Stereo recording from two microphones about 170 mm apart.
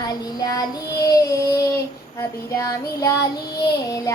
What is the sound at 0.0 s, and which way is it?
Child singing, 20° left (ahead or behind).